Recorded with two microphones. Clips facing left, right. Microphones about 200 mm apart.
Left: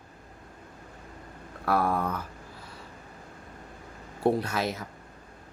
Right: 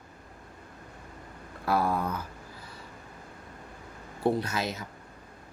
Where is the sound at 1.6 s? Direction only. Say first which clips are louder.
Left 1 dB; 60° left (ahead or behind).